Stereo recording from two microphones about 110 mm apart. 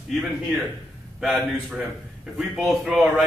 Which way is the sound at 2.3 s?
Centre (ahead or behind).